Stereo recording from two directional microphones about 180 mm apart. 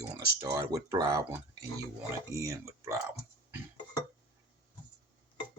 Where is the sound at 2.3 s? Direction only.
15° right (ahead or behind).